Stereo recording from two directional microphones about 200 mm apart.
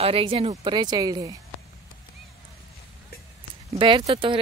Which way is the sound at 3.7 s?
25° right (ahead or behind).